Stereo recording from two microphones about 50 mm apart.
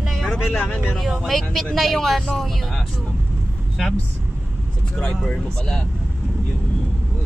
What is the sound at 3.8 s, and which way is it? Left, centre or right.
Speech, centre.